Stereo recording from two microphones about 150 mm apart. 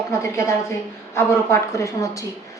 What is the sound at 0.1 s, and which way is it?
A woman's voice, 20° left (ahead or behind).